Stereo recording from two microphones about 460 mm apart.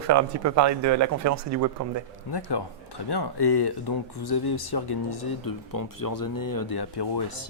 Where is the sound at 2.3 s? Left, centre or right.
Left.